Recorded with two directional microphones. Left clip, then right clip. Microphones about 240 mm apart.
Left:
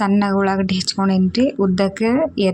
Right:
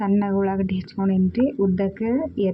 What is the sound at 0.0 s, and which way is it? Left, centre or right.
A woman's voice, left.